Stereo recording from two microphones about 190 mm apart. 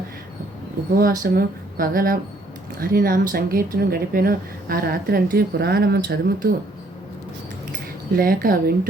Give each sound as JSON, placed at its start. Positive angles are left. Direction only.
{"t": 1.2, "sound": "a woman's voice", "side_deg": -50}
{"t": 8.1, "sound": "a woman's voice", "side_deg": -50}